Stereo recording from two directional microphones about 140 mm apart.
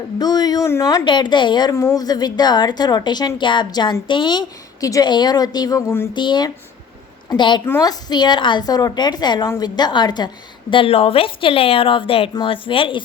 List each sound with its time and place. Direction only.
0.2 s a woman's voice: 30° left (ahead or behind)
1.7 s a woman's voice: 20° left (ahead or behind)
2.0 s a woman's voice: 30° left (ahead or behind)
6.1 s speech: 30° left (ahead or behind)
7.6 s a woman's voice: 15° left (ahead or behind)
7.9 s speech: 30° left (ahead or behind)